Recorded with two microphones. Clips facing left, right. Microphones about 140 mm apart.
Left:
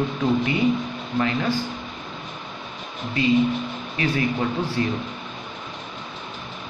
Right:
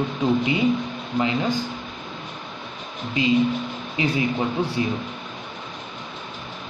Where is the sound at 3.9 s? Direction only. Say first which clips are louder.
Right 1 dB; 15° right (ahead or behind).